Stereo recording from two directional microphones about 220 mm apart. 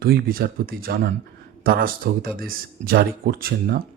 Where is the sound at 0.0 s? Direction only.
45° right (ahead or behind).